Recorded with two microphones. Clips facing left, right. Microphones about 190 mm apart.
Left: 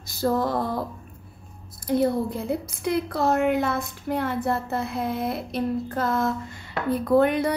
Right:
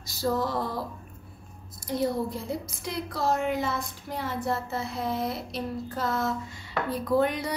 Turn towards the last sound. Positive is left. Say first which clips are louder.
# left 5 dB
turn(degrees=60)  # may be behind; listen again after turning